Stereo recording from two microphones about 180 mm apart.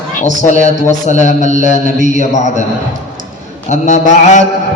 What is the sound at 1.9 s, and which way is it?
Speech, 45° right (ahead or behind).